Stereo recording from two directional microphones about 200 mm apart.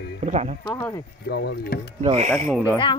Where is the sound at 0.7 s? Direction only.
15° left (ahead or behind).